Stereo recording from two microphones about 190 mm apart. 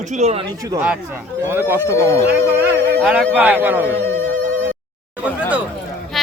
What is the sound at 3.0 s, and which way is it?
Speech, centre (ahead or behind).